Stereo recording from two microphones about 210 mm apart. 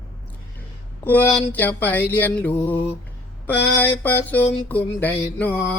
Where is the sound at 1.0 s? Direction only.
10° left (ahead or behind).